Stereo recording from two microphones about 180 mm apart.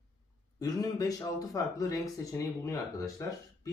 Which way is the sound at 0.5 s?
20° left (ahead or behind).